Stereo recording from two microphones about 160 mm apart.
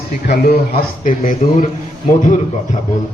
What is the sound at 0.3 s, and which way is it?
A man's voice, 75° left (ahead or behind).